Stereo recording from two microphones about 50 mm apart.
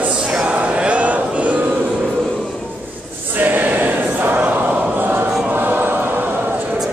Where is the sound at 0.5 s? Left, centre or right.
Right.